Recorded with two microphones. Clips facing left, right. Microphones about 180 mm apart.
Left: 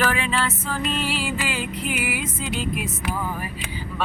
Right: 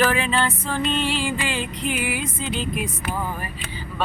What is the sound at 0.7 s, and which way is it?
Music, 5° left (ahead or behind).